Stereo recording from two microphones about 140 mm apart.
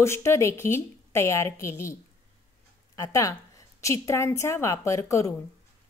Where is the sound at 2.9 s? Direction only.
25° left (ahead or behind).